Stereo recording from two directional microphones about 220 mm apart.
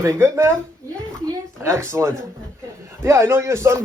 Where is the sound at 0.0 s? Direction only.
15° right (ahead or behind).